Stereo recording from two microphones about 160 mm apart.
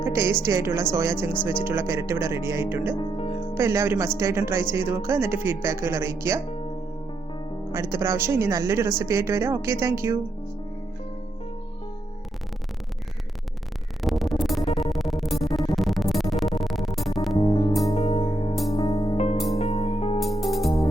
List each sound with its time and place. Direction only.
0.0 s a woman's voice: 15° right (ahead or behind)
2.9 s music: 35° left (ahead or behind)
3.5 s speech: 15° right (ahead or behind)
7.7 s speech: 15° right (ahead or behind)
14.0 s music: centre (ahead or behind)
17.3 s music: 25° left (ahead or behind)
17.9 s music: 40° left (ahead or behind)
18.7 s music: 20° left (ahead or behind)
19.0 s music: 45° left (ahead or behind)
20.4 s music: centre (ahead or behind)